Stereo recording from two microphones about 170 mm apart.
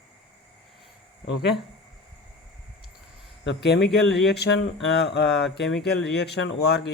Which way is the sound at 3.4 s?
85° left.